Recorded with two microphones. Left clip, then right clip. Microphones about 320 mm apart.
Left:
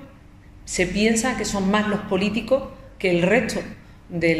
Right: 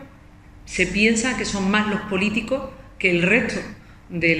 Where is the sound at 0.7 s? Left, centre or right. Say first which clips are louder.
Right 2 dB; left.